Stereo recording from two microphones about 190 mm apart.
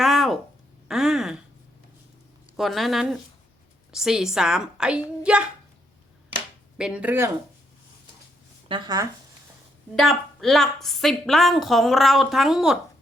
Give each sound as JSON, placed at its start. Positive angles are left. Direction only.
{"t": 0.0, "sound": "a sound", "side_deg": 0}
{"t": 2.6, "sound": "a woman's voice", "side_deg": 0}
{"t": 6.7, "sound": "speech", "side_deg": -5}
{"t": 8.6, "sound": "speech", "side_deg": -25}
{"t": 9.9, "sound": "a woman's voice", "side_deg": 0}